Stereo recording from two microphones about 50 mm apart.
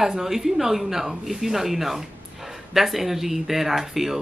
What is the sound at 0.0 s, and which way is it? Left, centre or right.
Speech, centre.